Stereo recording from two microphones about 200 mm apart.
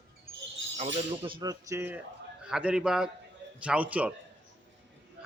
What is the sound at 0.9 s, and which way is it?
Cutlery, 25° right (ahead or behind).